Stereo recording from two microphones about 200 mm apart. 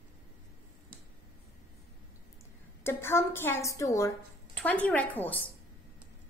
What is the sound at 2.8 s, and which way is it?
A woman's voice, 15° left (ahead or behind).